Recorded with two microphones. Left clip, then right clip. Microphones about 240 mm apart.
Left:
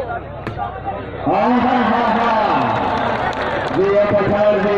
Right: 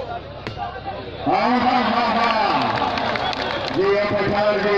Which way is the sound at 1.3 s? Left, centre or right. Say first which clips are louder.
Left 2 dB; centre.